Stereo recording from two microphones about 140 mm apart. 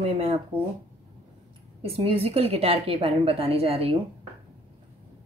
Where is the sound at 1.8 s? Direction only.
40° right (ahead or behind).